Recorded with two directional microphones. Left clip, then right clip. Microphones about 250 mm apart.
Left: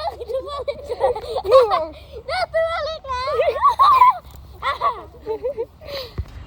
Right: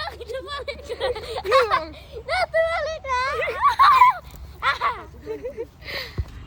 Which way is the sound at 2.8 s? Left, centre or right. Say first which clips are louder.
Left 1 dB; right.